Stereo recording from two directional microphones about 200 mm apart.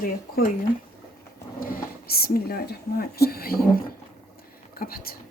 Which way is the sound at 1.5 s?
50° left (ahead or behind).